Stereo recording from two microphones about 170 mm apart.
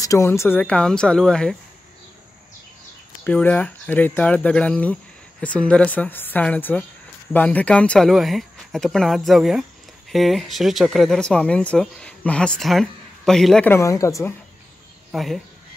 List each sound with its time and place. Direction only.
0.0 s speech: 15° left (ahead or behind)
3.3 s speech: 10° left (ahead or behind)
13.7 s speech: 15° left (ahead or behind)
15.0 s speech: centre (ahead or behind)